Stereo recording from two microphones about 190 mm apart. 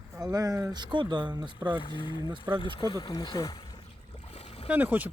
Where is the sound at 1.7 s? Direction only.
25° left (ahead or behind).